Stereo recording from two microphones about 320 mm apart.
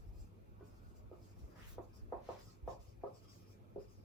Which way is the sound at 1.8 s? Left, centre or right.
Centre.